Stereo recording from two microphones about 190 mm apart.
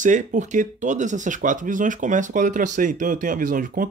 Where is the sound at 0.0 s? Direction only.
40° right (ahead or behind).